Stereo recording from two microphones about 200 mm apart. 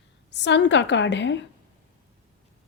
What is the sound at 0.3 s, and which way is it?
Speech, 60° left (ahead or behind).